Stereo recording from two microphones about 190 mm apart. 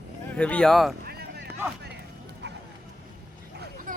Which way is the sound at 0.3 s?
5° left (ahead or behind).